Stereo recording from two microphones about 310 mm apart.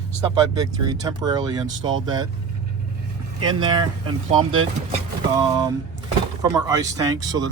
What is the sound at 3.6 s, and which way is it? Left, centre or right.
Speech, centre.